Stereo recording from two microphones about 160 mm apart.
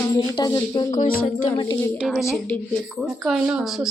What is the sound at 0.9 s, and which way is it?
Music, 50° left (ahead or behind).